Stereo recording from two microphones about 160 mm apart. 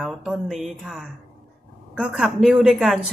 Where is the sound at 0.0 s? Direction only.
Centre (ahead or behind).